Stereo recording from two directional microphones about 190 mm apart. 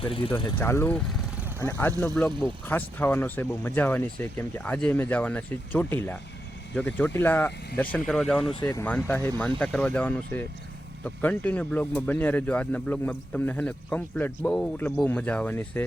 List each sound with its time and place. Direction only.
0.0 s speech: 25° left (ahead or behind)
0.6 s speech: 10° left (ahead or behind)